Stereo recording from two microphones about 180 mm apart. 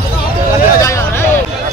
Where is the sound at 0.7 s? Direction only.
15° left (ahead or behind).